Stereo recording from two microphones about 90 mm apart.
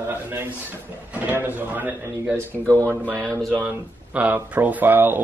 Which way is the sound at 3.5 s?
20° right (ahead or behind).